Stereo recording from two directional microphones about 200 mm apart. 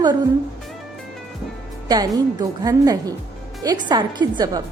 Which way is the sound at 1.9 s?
20° right (ahead or behind).